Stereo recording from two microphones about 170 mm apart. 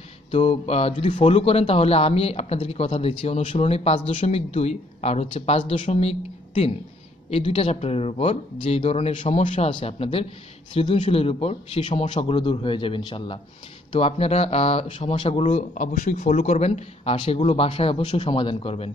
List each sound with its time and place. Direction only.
0.3 s speech: 35° left (ahead or behind)
15.7 s speech: 55° left (ahead or behind); by 18.9 s 35° left (ahead or behind)